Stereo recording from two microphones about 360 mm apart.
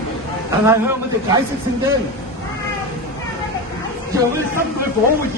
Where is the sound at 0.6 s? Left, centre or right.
Centre.